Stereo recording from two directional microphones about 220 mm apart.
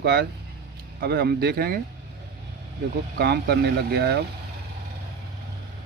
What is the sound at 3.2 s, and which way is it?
Speech, 45° right (ahead or behind).